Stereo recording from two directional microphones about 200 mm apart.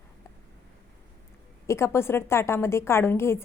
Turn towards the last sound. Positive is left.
turn(degrees=10)  # may be behind; listen again after turning